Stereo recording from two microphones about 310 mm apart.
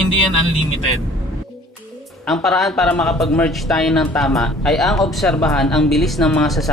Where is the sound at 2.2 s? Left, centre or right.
Centre.